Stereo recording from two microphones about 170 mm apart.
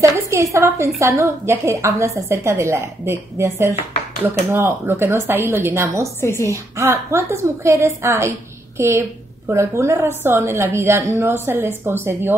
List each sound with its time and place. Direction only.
0.0 s a woman's voice: 20° right (ahead or behind)
6.2 s a woman's voice: 15° left (ahead or behind)
6.5 s a woman's voice: 15° right (ahead or behind)